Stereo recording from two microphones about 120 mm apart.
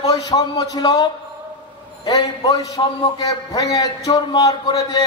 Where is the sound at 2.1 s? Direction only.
30° left (ahead or behind).